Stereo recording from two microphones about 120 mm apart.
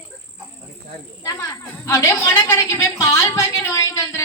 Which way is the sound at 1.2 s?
25° left (ahead or behind).